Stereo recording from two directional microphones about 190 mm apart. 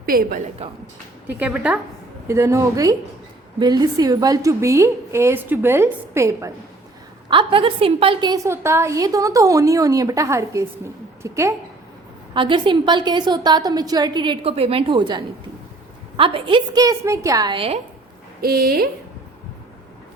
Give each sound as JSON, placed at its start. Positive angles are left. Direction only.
{"t": 0.0, "sound": "a woman's voice", "side_deg": -50}
{"t": 1.4, "sound": "a woman's voice", "side_deg": -5}
{"t": 2.2, "sound": "a woman's voice", "side_deg": -15}
{"t": 7.3, "sound": "a woman's voice", "side_deg": -25}
{"t": 12.3, "sound": "a woman's voice", "side_deg": -25}
{"t": 18.4, "sound": "speech", "side_deg": -55}